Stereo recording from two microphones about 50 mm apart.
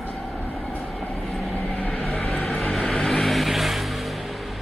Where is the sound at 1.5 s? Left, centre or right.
Left.